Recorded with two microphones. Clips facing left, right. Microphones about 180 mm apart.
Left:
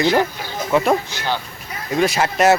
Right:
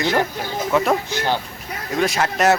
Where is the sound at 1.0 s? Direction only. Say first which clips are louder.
Right 3 dB; 50° right (ahead or behind).